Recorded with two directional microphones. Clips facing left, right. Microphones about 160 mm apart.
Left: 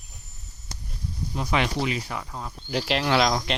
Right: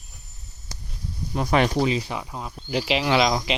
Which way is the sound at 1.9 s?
25° right (ahead or behind).